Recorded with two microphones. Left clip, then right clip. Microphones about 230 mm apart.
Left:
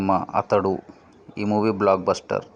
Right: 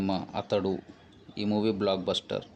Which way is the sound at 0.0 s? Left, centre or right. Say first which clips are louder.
Left 11 dB; centre.